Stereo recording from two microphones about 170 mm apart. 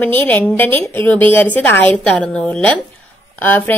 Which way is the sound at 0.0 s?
10° left (ahead or behind).